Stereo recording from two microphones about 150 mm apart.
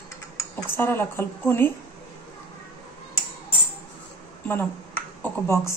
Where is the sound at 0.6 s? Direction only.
15° left (ahead or behind).